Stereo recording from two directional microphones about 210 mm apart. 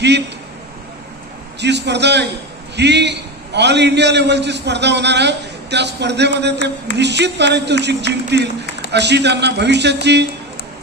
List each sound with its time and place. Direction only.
1.6 s a man's voice: 55° right (ahead or behind)